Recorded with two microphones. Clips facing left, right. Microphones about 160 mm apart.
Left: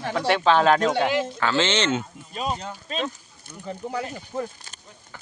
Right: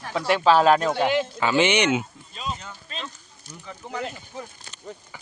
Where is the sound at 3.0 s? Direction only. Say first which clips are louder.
Left 8 dB; 55° left (ahead or behind).